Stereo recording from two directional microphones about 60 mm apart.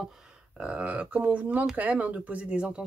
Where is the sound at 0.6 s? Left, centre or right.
Right.